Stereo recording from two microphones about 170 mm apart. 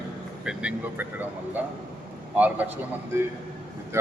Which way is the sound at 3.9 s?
15° right (ahead or behind).